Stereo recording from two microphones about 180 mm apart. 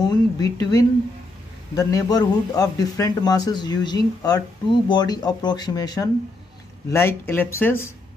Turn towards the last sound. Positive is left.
turn(degrees=10)  # may be behind; listen again after turning